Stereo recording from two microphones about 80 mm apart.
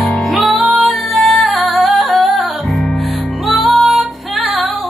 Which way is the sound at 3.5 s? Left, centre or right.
Centre.